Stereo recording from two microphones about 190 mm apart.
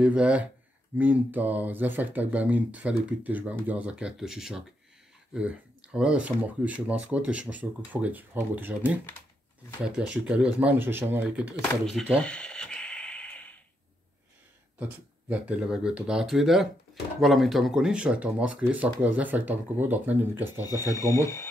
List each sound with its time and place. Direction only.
0.0 s speech: 5° right (ahead or behind)
11.7 s speech: centre (ahead or behind)
12.2 s a sound: 5° left (ahead or behind)
14.8 s speech: 10° right (ahead or behind)
20.9 s speech: 15° left (ahead or behind)